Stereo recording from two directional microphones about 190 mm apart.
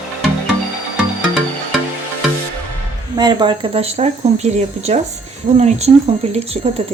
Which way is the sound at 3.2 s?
20° right (ahead or behind).